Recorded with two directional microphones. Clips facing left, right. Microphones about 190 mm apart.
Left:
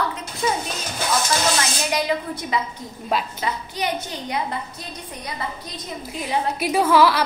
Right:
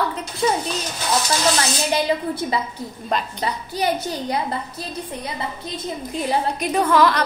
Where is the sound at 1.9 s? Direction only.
30° right (ahead or behind).